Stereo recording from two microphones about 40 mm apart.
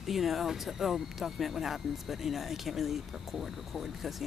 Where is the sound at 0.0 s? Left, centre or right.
Centre.